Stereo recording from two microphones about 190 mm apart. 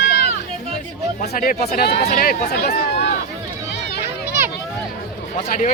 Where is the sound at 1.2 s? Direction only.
45° left (ahead or behind).